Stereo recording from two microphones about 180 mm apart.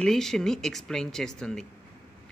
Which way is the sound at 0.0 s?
Centre (ahead or behind).